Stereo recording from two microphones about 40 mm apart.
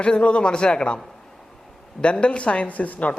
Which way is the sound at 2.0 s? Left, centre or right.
Left.